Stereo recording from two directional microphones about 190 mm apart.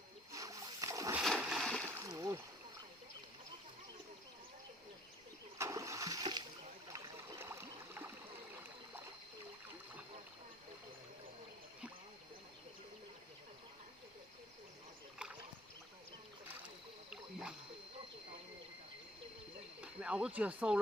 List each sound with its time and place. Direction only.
0.3 s splash: 15° right (ahead or behind)
1.2 s splash: centre (ahead or behind)
2.0 s a sound: 20° right (ahead or behind)
5.5 s splash: 15° right (ahead or behind)
6.9 s a sound: 15° right (ahead or behind)
19.8 s speech: 5° right (ahead or behind)